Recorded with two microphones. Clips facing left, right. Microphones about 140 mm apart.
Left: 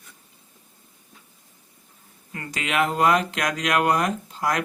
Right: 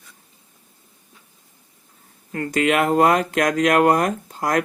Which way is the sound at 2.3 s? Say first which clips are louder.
Right 9 dB; 50° right (ahead or behind).